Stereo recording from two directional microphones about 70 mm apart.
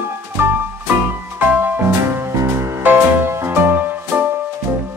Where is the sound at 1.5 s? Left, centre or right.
Right.